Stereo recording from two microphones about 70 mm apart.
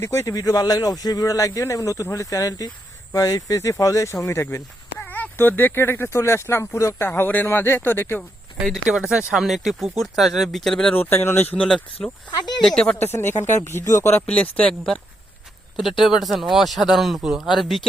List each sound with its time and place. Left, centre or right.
0.0 s speech: left
4.9 s speech: left
7.1 s speech: left
9.0 s speech: centre
10.9 s speech: left
11.6 s speech: centre
13.0 s speech: left
14.3 s speech: centre
15.7 s speech: centre